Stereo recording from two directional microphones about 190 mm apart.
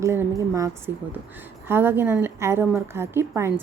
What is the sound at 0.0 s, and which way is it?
A woman's voice, 15° right (ahead or behind).